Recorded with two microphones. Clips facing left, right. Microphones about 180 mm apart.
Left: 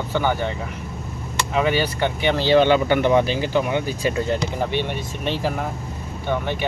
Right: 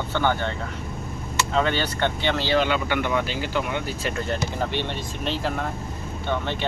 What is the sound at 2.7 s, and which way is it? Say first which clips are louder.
Speech: left 7 dB; 35° left (ahead or behind).